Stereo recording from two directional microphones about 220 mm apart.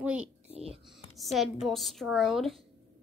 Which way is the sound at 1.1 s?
Centre (ahead or behind).